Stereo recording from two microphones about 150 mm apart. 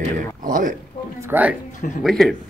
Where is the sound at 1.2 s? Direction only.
10° right (ahead or behind).